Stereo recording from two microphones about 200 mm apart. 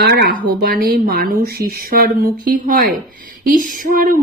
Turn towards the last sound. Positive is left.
turn(degrees=-45)  # may be behind; listen again after turning